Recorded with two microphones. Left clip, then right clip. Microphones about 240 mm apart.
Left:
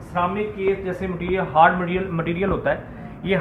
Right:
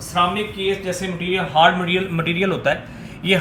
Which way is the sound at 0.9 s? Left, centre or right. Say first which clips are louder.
Right 2 dB; right.